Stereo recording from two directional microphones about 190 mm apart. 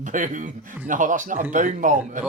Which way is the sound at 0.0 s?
40° right (ahead or behind).